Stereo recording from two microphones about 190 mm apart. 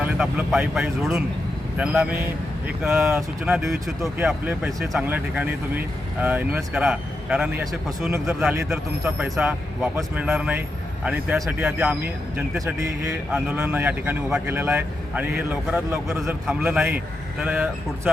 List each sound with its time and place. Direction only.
0.0 s a man's voice: 5° right (ahead or behind)